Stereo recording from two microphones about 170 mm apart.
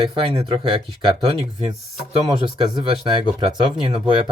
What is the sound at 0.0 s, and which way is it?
Speech, 30° right (ahead or behind).